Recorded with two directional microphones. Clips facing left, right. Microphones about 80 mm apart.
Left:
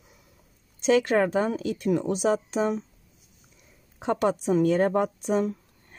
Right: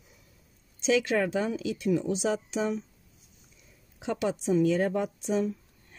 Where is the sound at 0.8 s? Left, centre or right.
Left.